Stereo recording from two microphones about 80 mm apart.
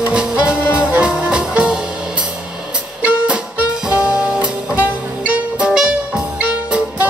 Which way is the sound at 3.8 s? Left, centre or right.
Centre.